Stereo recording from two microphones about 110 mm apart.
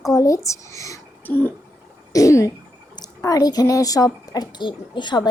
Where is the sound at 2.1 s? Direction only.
30° left (ahead or behind).